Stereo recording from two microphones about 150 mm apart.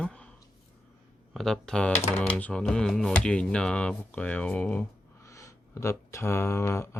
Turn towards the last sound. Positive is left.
turn(degrees=15)  # may be behind; listen again after turning